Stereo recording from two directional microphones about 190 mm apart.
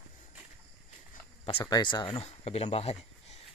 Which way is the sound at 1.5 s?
25° left (ahead or behind).